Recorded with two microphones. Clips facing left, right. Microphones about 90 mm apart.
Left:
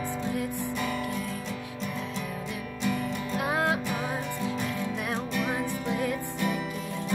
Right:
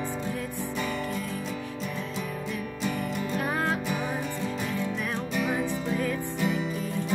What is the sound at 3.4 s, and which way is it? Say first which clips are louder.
Music: left 2 dB; 15° left (ahead or behind).